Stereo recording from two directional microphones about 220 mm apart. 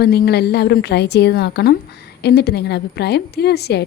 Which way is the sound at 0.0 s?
45° left (ahead or behind).